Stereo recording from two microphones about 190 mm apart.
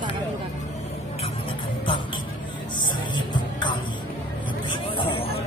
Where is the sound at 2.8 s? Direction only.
25° left (ahead or behind).